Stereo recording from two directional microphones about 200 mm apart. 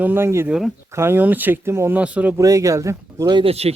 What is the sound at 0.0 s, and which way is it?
Speech, 10° right (ahead or behind).